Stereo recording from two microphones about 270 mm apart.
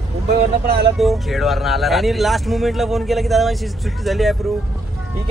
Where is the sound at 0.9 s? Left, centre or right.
Centre.